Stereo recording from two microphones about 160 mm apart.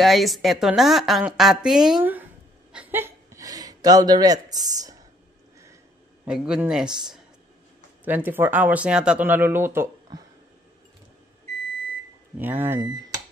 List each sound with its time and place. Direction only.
0.0 s a woman's voice: centre (ahead or behind)
2.7 s a sound: 10° right (ahead or behind)
6.2 s a woman's voice: 5° right (ahead or behind)
12.4 s speech: 10° right (ahead or behind)